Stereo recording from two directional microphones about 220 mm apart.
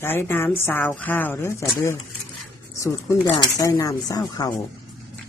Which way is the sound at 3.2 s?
20° left (ahead or behind).